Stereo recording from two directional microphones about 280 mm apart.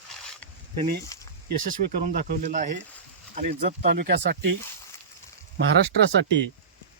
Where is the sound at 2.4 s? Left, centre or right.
Right.